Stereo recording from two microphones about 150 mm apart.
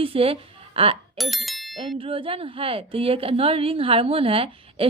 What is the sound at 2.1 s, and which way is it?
A woman's voice, 35° right (ahead or behind).